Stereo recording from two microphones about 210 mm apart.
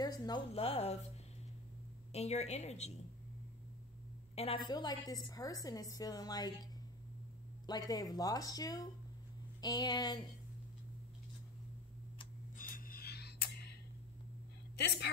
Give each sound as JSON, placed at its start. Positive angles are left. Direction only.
{"t": 0.0, "sound": "a woman's voice", "side_deg": 20}
{"t": 2.1, "sound": "a woman's voice", "side_deg": 30}
{"t": 4.6, "sound": "a woman's voice", "side_deg": 20}
{"t": 12.5, "sound": "music", "side_deg": 40}